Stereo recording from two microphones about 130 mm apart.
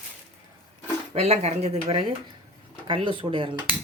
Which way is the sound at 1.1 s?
55° right (ahead or behind).